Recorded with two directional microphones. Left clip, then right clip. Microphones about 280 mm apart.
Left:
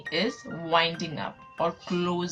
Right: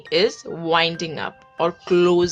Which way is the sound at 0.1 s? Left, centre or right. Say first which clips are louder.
Right 10 dB; right.